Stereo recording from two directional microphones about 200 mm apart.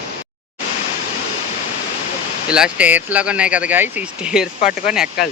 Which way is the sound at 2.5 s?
5° right (ahead or behind).